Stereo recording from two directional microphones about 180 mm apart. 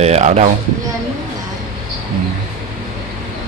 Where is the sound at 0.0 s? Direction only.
35° right (ahead or behind).